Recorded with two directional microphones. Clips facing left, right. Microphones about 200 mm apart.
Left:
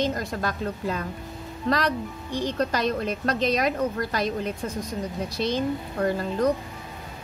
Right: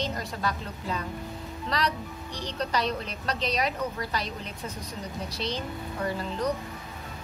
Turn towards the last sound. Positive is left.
turn(degrees=50)  # may be behind; listen again after turning